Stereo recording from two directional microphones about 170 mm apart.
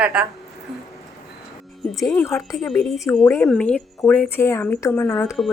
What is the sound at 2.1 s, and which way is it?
Speech, 15° left (ahead or behind).